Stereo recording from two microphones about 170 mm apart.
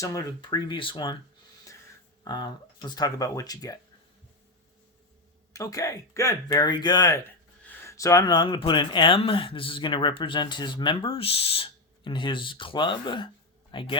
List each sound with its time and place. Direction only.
0.0 s speech: 20° left (ahead or behind)
2.2 s speech: 25° left (ahead or behind)
5.5 s speech: 20° left (ahead or behind)